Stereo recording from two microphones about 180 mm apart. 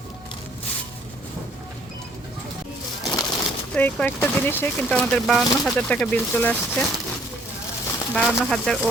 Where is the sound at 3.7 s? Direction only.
10° left (ahead or behind).